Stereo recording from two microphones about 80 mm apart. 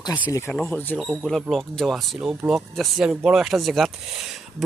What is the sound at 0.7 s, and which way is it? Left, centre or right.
Speech, left.